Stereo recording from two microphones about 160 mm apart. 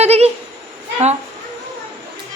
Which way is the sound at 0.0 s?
40° right (ahead or behind).